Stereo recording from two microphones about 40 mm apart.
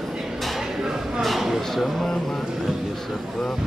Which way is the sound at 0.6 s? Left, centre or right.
Centre.